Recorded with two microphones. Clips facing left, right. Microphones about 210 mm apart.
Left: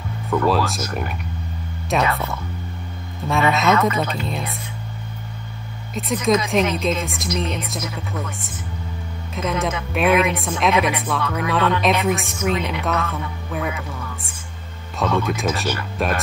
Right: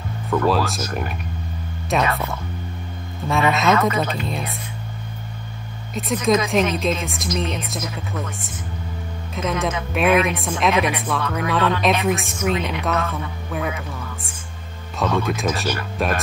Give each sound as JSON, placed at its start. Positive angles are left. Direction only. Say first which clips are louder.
{"t": 0.3, "sound": "a woman's voice", "louder": "even", "side_deg": 0}
{"t": 3.3, "sound": "a woman's voice", "louder": "even", "side_deg": 0}
{"t": 5.9, "sound": "a woman's voice", "louder": "even", "side_deg": 0}
{"t": 15.0, "sound": "a woman's voice", "louder": "even", "side_deg": 0}